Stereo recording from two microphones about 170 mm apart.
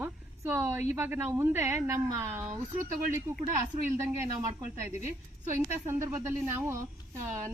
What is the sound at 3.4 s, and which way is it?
Speech, 50° right (ahead or behind).